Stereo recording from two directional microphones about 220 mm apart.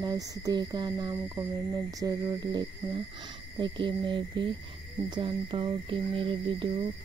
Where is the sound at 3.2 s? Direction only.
20° right (ahead or behind).